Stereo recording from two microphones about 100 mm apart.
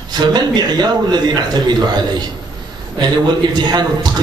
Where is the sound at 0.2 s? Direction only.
45° right (ahead or behind).